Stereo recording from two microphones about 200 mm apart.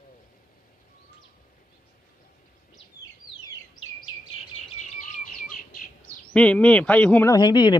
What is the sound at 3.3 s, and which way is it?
Bird, 25° left (ahead or behind).